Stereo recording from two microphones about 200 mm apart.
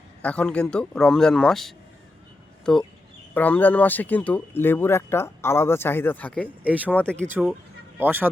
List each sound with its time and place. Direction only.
0.2 s a man's voice: 5° left (ahead or behind)
3.3 s speech: 10° left (ahead or behind)
6.6 s speech: 10° right (ahead or behind)
6.8 s a man's voice: 5° left (ahead or behind)
7.3 s speech: 10° right (ahead or behind)